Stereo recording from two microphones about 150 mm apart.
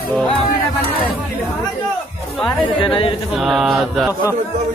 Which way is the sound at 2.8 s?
35° left (ahead or behind).